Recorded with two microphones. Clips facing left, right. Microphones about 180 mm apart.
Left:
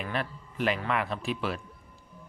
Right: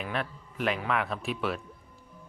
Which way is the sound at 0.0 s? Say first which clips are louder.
Even; centre (ahead or behind).